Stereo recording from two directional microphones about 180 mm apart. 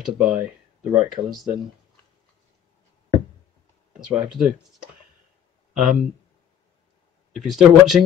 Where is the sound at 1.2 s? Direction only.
20° right (ahead or behind).